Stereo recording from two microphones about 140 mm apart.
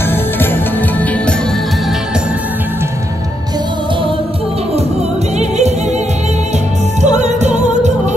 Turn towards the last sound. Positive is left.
turn(degrees=-55)  # may be behind; listen again after turning